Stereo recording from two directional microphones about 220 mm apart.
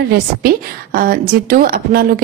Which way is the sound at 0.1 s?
40° right (ahead or behind).